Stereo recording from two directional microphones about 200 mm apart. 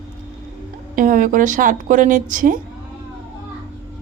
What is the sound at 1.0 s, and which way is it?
A woman's voice, 40° right (ahead or behind).